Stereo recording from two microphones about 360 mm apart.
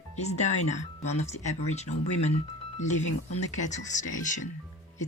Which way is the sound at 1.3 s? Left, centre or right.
Left.